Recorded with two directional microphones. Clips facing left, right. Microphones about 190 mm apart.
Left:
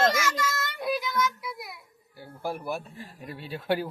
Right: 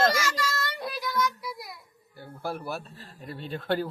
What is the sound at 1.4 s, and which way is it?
A child's voice, centre (ahead or behind).